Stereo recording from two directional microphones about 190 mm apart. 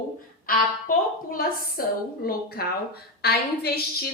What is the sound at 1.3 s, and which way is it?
A woman's voice, 50° left (ahead or behind).